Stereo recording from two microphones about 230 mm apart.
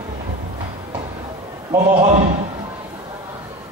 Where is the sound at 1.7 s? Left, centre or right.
Right.